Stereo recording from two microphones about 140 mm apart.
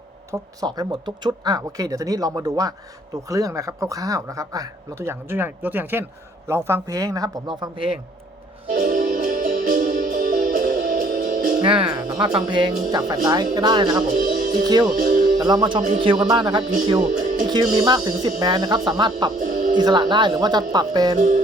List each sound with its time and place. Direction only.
0.3 s speech: 30° right (ahead or behind)
8.7 s music: 80° right
11.6 s speech: 35° right (ahead or behind)
14.1 s music: 80° right
14.5 s speech: 30° right (ahead or behind)
19.4 s music: 60° right (ahead or behind)
19.7 s speech: 30° right (ahead or behind)
21.2 s music: 60° right (ahead or behind)